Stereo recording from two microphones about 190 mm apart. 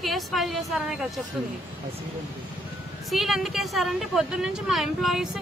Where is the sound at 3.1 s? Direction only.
Centre (ahead or behind).